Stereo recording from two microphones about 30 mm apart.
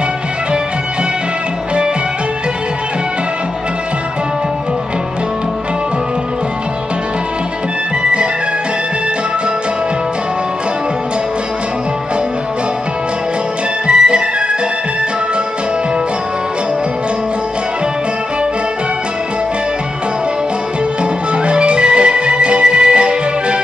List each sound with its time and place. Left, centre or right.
8.0 s music: right
13.8 s music: right
21.0 s music: right